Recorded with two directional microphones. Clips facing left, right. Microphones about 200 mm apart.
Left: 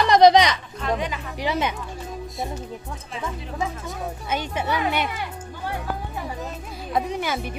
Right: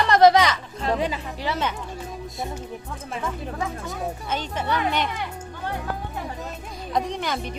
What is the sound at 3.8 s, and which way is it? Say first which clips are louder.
Speech: right 1 dB; centre (ahead or behind).